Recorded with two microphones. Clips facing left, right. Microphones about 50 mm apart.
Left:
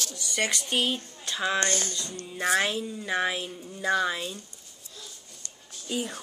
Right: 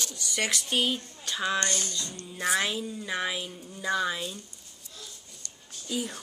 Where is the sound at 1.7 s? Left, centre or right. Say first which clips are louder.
Left 2 dB; left.